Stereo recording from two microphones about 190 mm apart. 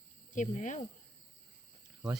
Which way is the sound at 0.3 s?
40° left (ahead or behind).